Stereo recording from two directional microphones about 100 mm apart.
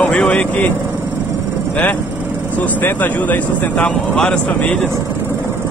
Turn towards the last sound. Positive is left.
turn(degrees=10)  # may be behind; listen again after turning